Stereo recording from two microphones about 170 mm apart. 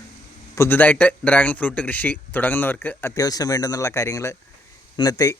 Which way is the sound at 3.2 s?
20° left (ahead or behind).